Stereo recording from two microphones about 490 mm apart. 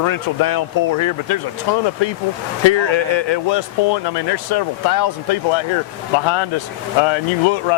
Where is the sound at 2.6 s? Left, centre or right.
Left.